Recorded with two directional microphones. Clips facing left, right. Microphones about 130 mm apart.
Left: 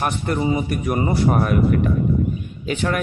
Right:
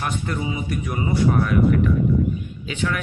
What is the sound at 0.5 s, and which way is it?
Speech, 55° left (ahead or behind).